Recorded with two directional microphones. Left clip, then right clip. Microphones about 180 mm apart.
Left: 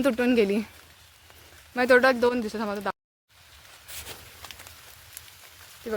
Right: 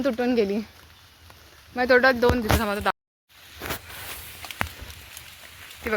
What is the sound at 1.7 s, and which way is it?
Speech, 20° left (ahead or behind).